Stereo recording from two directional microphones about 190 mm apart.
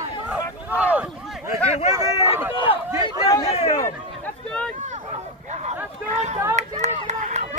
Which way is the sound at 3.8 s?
5° left (ahead or behind).